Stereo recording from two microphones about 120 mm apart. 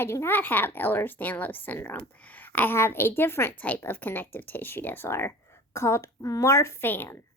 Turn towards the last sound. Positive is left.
turn(degrees=15)  # may be behind; listen again after turning